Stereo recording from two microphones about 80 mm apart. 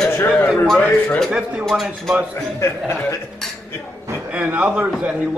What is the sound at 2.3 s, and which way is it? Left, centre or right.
Speech, left.